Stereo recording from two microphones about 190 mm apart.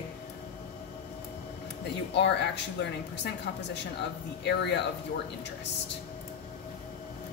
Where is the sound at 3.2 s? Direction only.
65° left (ahead or behind).